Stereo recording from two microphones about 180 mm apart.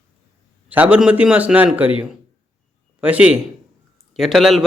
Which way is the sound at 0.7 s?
10° right (ahead or behind).